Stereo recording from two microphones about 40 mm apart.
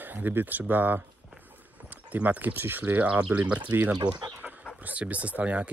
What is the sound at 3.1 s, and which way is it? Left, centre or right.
Speech, right.